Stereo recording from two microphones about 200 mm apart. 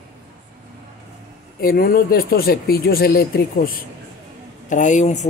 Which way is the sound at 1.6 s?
50° left (ahead or behind).